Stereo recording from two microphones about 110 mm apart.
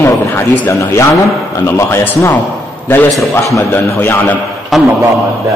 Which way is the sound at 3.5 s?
25° left (ahead or behind).